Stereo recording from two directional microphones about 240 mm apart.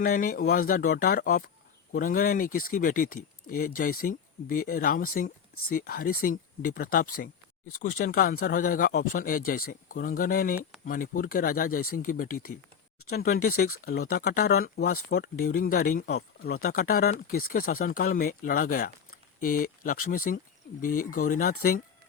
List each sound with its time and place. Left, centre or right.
0.0 s speech: left
13.5 s speech: left
14.1 s speech: left